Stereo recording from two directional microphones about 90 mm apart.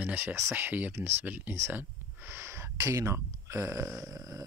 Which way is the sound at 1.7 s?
25° right (ahead or behind).